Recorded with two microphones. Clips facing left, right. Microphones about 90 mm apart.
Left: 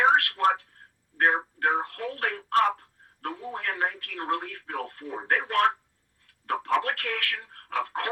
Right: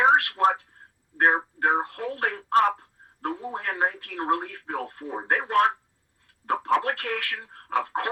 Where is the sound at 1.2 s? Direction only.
25° right (ahead or behind).